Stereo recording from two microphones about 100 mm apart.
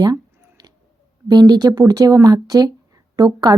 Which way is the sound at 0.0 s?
40° right (ahead or behind).